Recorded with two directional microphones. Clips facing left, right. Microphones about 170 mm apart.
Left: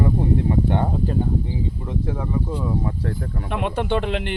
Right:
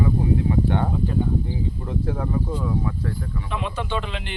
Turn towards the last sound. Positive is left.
turn(degrees=60)  # may be behind; listen again after turning